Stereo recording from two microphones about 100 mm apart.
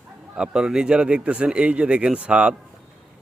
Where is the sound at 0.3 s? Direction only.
5° right (ahead or behind).